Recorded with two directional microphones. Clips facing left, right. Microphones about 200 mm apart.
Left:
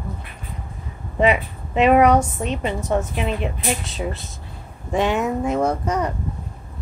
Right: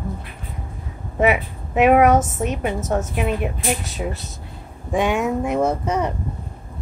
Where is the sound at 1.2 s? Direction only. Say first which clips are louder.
Even; 10° right (ahead or behind).